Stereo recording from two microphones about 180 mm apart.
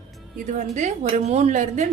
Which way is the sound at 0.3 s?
45° right (ahead or behind).